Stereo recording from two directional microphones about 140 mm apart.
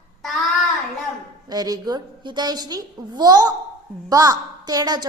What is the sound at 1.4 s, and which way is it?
A woman's voice, 25° right (ahead or behind).